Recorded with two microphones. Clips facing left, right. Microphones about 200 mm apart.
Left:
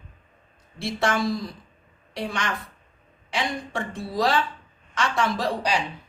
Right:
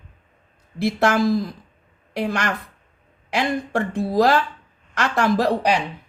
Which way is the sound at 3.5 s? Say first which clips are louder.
Right 7 dB; 60° right (ahead or behind).